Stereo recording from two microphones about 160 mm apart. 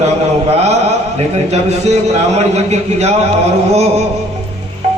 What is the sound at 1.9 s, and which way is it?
A man's voice, 45° right (ahead or behind).